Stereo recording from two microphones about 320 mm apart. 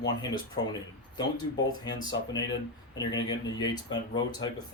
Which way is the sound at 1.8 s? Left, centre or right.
Centre.